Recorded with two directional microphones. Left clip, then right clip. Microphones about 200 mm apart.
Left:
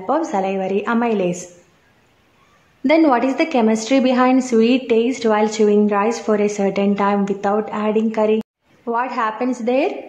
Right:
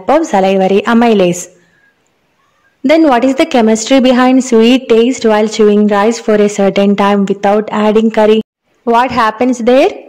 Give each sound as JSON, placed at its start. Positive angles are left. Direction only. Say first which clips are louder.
{"t": 0.0, "sound": "a woman's voice", "louder": "right 10 dB", "side_deg": -40}
{"t": 2.8, "sound": "a woman's voice", "louder": "right 7 dB", "side_deg": -30}